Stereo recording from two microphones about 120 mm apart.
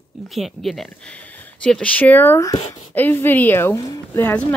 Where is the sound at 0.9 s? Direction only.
10° left (ahead or behind).